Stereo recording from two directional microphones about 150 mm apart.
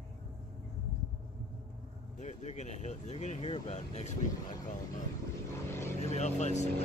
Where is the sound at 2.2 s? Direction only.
50° left (ahead or behind).